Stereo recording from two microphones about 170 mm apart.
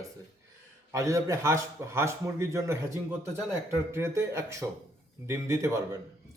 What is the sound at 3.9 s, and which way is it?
A man's voice, 15° right (ahead or behind).